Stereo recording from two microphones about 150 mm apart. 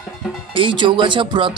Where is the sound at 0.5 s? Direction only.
35° right (ahead or behind).